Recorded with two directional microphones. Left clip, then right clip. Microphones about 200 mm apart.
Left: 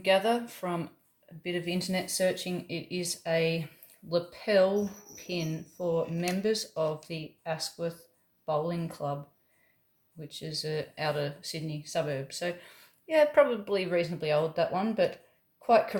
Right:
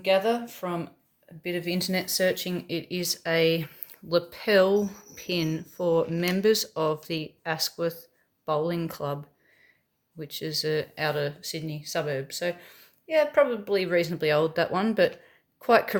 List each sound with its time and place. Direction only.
0.0 s speech: 15° right (ahead or behind); by 9.1 s 40° right (ahead or behind)
10.2 s speech: 40° right (ahead or behind)
12.6 s a woman's voice: 10° right (ahead or behind)
13.7 s speech: 30° right (ahead or behind)